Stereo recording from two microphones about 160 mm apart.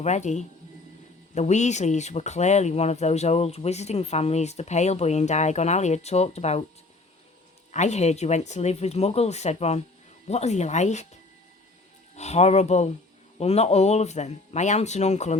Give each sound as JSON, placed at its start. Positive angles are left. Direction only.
{"t": 0.0, "sound": "speech", "side_deg": 45}
{"t": 7.7, "sound": "speech", "side_deg": 45}
{"t": 12.1, "sound": "speech", "side_deg": 45}